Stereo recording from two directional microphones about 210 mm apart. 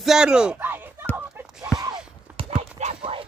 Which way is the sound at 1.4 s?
5° right (ahead or behind).